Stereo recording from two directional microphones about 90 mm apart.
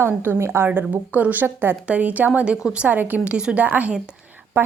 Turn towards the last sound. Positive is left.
turn(degrees=-20)  # may be behind; listen again after turning